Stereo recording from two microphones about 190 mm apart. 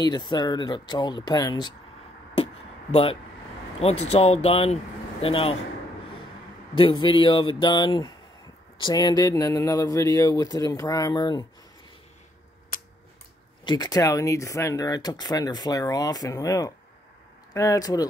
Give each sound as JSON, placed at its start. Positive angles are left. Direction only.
{"t": 0.0, "sound": "speech", "side_deg": 20}
{"t": 2.3, "sound": "a sound", "side_deg": 30}
{"t": 3.8, "sound": "speech", "side_deg": 35}
{"t": 6.7, "sound": "speech", "side_deg": 25}
{"t": 13.7, "sound": "speech", "side_deg": 20}